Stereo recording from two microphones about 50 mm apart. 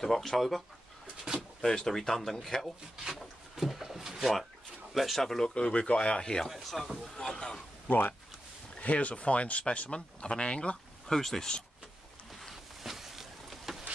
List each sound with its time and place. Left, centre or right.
0.0 s speech: centre
3.0 s drawer open or close: centre
4.9 s speech: centre
5.5 s speech: left
6.5 s speech: centre
7.0 s speech: centre
8.7 s speech: left
11.1 s speech: centre
12.4 s a sound: centre